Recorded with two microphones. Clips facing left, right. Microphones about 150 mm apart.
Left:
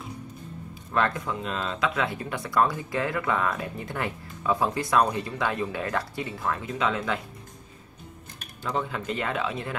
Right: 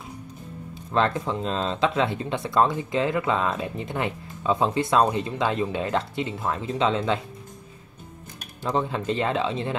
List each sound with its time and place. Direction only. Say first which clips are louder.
0.9 s speech: right 3 dB; 25° right (ahead or behind)
8.6 s speech: right 4 dB; 25° right (ahead or behind)